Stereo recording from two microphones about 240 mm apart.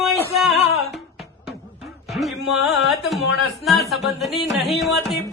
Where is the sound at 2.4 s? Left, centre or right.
Centre.